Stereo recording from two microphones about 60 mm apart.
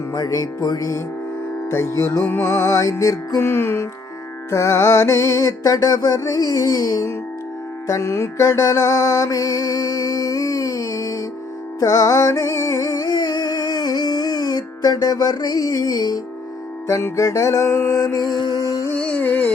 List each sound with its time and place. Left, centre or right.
0.1 s music: left
1.7 s music: left
2.2 s music: left
2.5 s music: left
3.4 s music: left
4.5 s music: left
7.9 s music: left
16.8 s music: left
17.7 s music: left
17.9 s music: left
18.9 s music: left